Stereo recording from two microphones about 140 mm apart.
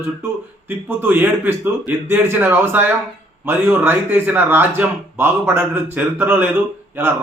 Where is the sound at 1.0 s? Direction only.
15° right (ahead or behind).